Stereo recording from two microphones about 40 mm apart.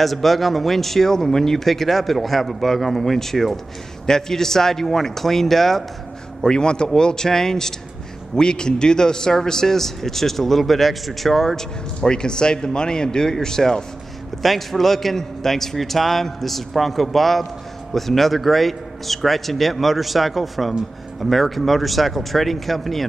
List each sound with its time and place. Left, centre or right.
0.0 s speech: centre
6.4 s speech: left
14.4 s speech: centre